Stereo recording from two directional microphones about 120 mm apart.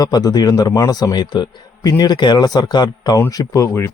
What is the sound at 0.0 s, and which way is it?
A man's voice, 30° left (ahead or behind).